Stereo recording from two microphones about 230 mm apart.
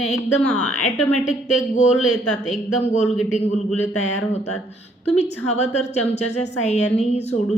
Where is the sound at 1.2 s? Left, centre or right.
Left.